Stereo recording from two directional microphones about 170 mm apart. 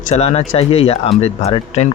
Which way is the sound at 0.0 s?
40° left (ahead or behind).